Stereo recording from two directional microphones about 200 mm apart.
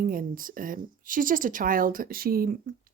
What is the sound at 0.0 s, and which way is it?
Speech, 45° right (ahead or behind).